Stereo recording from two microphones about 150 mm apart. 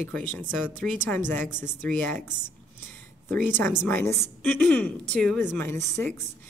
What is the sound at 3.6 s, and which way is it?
Speech, 15° left (ahead or behind).